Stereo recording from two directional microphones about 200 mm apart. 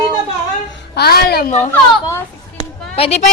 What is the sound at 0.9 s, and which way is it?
Child singing, 50° left (ahead or behind).